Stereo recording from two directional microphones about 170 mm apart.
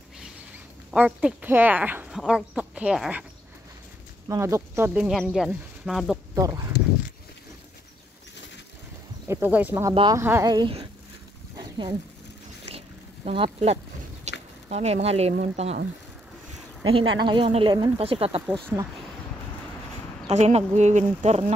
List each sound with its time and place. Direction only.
0.9 s speech: 10° right (ahead or behind)
4.3 s speech: 15° right (ahead or behind)
6.3 s speech: 20° right (ahead or behind)
9.3 s speech: 10° right (ahead or behind)
11.5 s wild animals: 20° right (ahead or behind)
12.6 s a sound: 35° right (ahead or behind)
14.7 s speech: 40° right (ahead or behind)
16.8 s speech: 30° right (ahead or behind)
20.2 s speech: 40° right (ahead or behind)